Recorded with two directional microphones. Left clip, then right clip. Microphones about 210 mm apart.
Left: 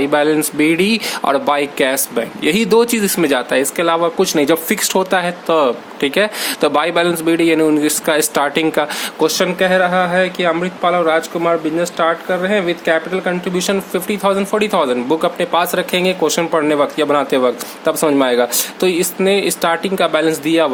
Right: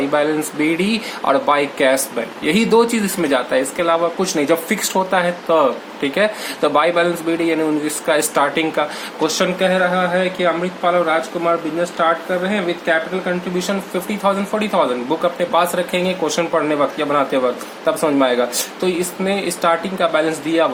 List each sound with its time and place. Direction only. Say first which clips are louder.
0.1 s speech: left 3 dB; 45° left (ahead or behind)